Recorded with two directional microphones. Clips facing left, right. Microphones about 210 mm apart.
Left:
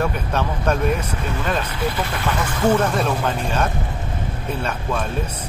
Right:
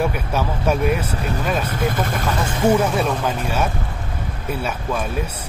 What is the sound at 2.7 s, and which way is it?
Speech, 5° right (ahead or behind).